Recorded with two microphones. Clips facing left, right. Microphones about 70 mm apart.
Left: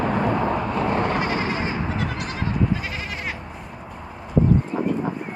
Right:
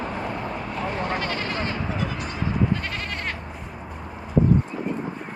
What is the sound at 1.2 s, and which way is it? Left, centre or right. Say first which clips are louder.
Sheep: left 3 dB; centre.